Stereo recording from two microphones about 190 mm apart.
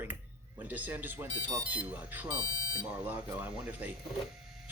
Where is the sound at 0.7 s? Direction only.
10° right (ahead or behind).